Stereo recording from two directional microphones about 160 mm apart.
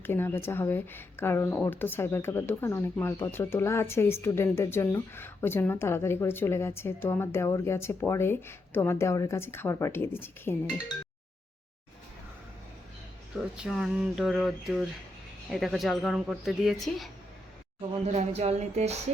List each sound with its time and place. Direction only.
0.0 s a woman's voice: 15° left (ahead or behind)
13.6 s speech: 5° right (ahead or behind)
18.0 s music: 40° right (ahead or behind)